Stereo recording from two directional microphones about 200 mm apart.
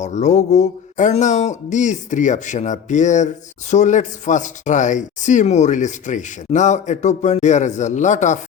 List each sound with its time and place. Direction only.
0.0 s speech: 35° left (ahead or behind)